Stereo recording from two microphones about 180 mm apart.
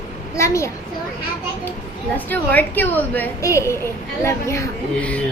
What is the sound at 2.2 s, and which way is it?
A woman's voice, 10° left (ahead or behind).